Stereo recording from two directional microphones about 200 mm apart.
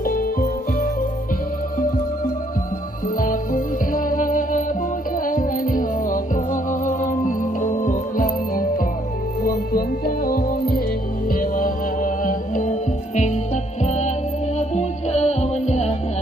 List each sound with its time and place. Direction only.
0.0 s music: 45° left (ahead or behind)
3.2 s music: 40° left (ahead or behind)